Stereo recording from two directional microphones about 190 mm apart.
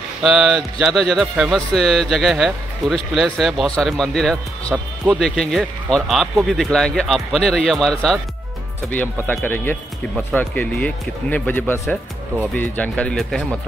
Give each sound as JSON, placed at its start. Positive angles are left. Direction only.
{"t": 0.3, "sound": "speech", "side_deg": -5}